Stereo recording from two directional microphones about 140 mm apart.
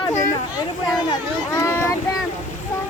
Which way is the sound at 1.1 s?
25° left (ahead or behind).